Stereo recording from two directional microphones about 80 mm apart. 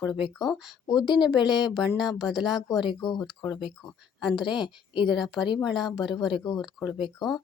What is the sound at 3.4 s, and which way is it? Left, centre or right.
Speech, left.